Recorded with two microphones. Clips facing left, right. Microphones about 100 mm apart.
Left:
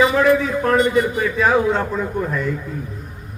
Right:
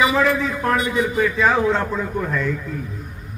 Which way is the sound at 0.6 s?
Centre (ahead or behind).